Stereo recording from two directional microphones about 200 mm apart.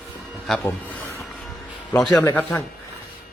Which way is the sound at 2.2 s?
10° left (ahead or behind).